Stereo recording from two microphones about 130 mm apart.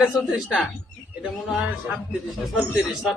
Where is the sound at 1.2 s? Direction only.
5° right (ahead or behind).